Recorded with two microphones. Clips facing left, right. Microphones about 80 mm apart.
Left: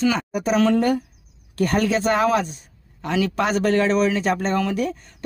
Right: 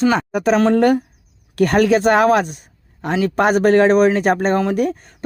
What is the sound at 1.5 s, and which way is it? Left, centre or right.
Speech, right.